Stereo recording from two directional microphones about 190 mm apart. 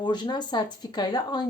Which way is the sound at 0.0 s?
25° left (ahead or behind).